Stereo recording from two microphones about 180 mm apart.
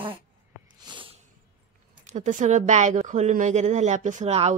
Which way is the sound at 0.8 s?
25° right (ahead or behind).